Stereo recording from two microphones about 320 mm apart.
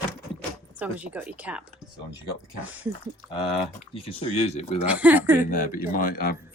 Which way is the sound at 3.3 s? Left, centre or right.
Centre.